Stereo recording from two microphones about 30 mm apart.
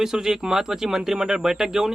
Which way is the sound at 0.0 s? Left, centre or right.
Centre.